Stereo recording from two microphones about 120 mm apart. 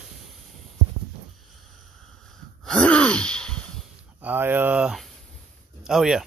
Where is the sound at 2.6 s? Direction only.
5° left (ahead or behind).